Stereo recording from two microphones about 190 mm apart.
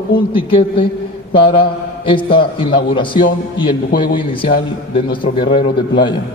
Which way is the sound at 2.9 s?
25° left (ahead or behind).